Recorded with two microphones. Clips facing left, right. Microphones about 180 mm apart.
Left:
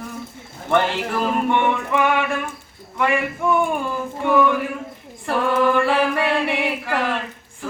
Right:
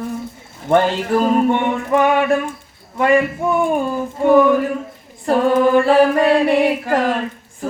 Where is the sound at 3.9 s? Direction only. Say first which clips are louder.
Right 7 dB; 40° right (ahead or behind).